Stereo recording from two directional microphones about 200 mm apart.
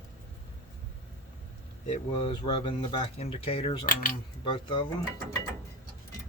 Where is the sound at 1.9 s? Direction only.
25° left (ahead or behind).